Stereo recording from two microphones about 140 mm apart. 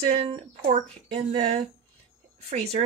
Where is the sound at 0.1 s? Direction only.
45° right (ahead or behind).